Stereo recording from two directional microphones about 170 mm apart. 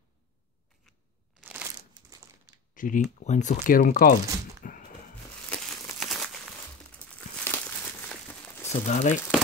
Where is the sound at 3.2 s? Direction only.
45° left (ahead or behind).